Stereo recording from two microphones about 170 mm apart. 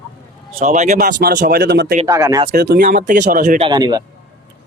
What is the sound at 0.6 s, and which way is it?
Speech, 45° right (ahead or behind).